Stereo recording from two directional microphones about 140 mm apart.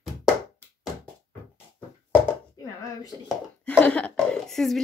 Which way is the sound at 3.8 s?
10° left (ahead or behind).